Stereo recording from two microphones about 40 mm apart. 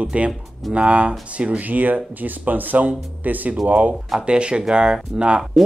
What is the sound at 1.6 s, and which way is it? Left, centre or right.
Speech, right.